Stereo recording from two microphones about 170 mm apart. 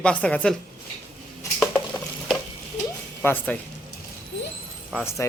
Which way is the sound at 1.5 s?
5° left (ahead or behind).